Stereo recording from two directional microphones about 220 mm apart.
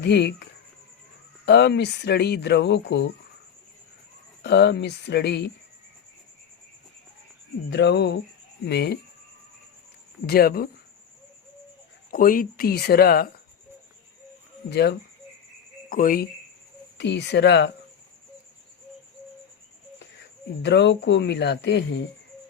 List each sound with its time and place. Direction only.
0.0 s speech: 50° left (ahead or behind)
1.5 s speech: 50° left (ahead or behind)
4.4 s speech: 50° left (ahead or behind)
7.7 s speech: 50° left (ahead or behind)
10.2 s speech: 45° left (ahead or behind)
12.1 s speech: 40° left (ahead or behind)
14.7 s speech: 50° left (ahead or behind)
17.0 s speech: 50° left (ahead or behind)
20.6 s speech: 50° left (ahead or behind)